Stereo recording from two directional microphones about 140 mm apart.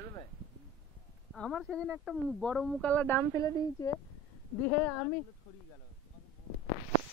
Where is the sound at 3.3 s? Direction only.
25° left (ahead or behind).